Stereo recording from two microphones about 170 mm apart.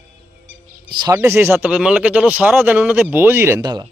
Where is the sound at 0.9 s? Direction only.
20° right (ahead or behind).